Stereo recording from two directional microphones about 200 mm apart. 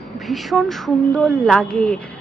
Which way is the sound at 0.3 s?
Centre (ahead or behind).